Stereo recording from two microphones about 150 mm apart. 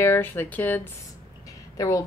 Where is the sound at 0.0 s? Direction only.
15° left (ahead or behind).